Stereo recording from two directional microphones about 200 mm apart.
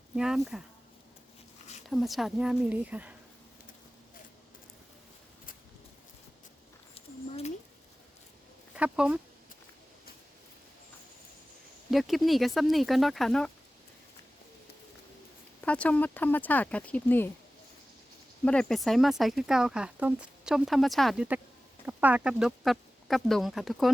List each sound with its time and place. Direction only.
0.2 s speech: centre (ahead or behind)
1.9 s speech: centre (ahead or behind)
6.9 s a sound: 30° left (ahead or behind)
8.7 s speech: 5° right (ahead or behind)
11.9 s speech: centre (ahead or behind)
15.6 s speech: 5° left (ahead or behind)
18.4 s speech: 5° left (ahead or behind)